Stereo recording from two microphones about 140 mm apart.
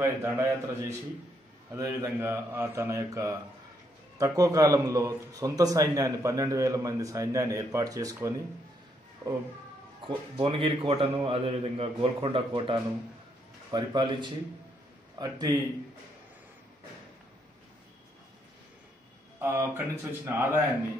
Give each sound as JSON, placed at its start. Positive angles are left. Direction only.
{"t": 0.0, "sound": "a man's voice", "side_deg": -20}
{"t": 10.0, "sound": "a man's voice", "side_deg": -35}
{"t": 19.4, "sound": "speech", "side_deg": -20}